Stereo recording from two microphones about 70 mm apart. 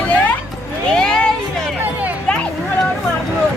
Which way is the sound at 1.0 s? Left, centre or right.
Centre.